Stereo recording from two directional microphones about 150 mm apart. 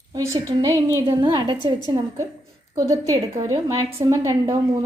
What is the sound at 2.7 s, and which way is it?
A woman's voice, 20° right (ahead or behind).